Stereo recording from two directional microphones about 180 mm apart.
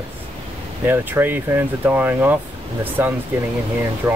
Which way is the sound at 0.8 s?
10° right (ahead or behind).